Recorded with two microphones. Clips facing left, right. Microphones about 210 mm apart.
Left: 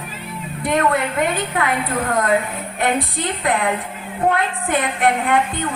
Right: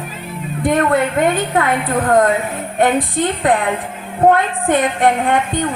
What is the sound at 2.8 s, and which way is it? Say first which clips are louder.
A woman's voice: right 6 dB; 45° right (ahead or behind).